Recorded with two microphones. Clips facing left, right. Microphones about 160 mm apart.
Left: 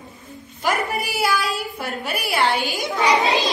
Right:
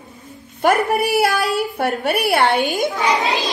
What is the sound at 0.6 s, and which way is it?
A woman's voice, 60° right (ahead or behind).